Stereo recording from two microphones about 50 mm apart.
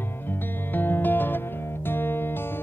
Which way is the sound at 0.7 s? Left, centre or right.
Left.